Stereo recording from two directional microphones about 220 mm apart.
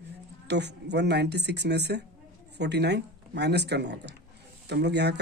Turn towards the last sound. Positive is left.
turn(degrees=-50)  # may be behind; listen again after turning